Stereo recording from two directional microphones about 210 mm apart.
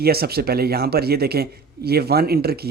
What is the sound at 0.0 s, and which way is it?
Speech, 50° right (ahead or behind).